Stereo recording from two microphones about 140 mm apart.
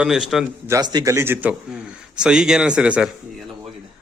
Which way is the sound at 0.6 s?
25° right (ahead or behind).